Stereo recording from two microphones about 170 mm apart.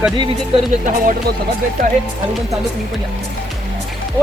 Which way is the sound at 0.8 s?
55° right (ahead or behind).